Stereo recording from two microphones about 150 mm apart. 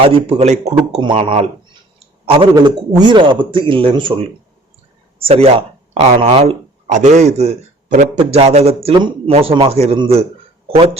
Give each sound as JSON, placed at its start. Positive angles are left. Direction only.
{"t": 0.0, "sound": "speech", "side_deg": -40}
{"t": 2.6, "sound": "speech", "side_deg": -25}
{"t": 5.2, "sound": "speech", "side_deg": -40}
{"t": 6.8, "sound": "a man's voice", "side_deg": -50}